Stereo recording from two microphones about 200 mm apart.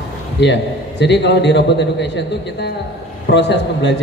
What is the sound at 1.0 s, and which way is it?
A woman's voice, 60° left (ahead or behind).